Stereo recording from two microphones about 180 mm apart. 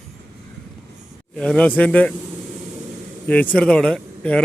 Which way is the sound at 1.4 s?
5° left (ahead or behind).